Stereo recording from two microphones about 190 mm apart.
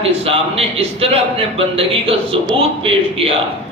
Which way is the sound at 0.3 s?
30° right (ahead or behind).